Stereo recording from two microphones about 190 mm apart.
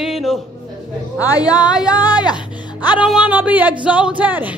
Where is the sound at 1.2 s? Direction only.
20° left (ahead or behind).